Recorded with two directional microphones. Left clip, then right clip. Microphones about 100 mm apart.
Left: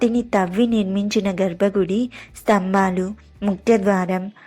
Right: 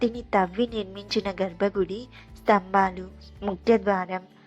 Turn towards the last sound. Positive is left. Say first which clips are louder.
# left 5 dB
turn(degrees=40)  # may be behind; listen again after turning